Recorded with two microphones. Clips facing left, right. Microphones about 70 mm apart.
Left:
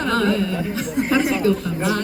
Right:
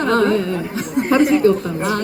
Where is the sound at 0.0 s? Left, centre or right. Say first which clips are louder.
Right 4 dB; right.